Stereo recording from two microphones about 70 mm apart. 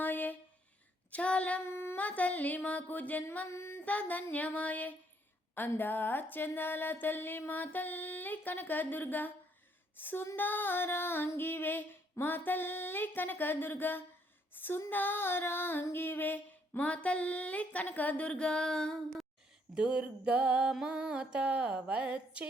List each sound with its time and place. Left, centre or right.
0.0 s a sound: left
1.6 s humming: left
2.0 s music: left
3.5 s music: left
3.8 s music: left
10.3 s female singing: left
14.8 s music: left; by 18.9 s centre
19.7 s music: centre